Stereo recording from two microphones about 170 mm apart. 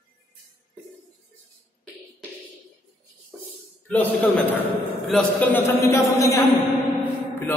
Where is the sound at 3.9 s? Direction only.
5° left (ahead or behind).